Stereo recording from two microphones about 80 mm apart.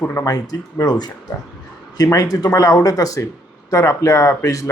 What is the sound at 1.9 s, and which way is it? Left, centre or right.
Speech, left.